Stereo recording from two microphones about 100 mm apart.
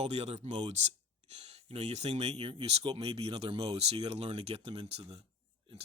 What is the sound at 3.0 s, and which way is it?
Speech, 80° right.